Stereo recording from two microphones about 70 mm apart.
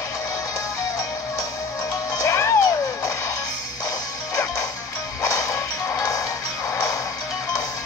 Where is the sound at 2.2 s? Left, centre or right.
Left.